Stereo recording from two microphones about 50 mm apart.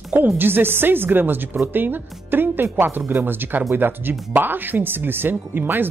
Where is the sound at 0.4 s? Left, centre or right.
Right.